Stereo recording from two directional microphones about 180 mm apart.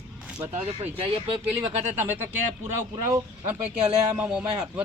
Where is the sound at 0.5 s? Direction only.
35° right (ahead or behind).